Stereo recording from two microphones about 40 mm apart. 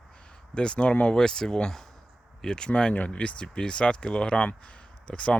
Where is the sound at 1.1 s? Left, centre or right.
Centre.